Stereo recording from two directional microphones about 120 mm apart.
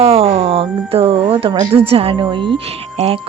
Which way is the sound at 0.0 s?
55° right (ahead or behind).